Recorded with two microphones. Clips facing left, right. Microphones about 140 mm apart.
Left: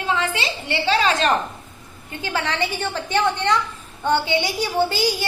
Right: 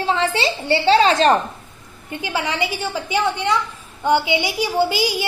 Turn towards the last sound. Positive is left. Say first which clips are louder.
# right 1 dB
turn(degrees=-15)  # may be behind; listen again after turning